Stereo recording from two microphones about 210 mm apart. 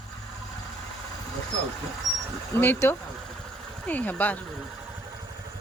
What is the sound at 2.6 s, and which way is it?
A woman's voice, 10° left (ahead or behind).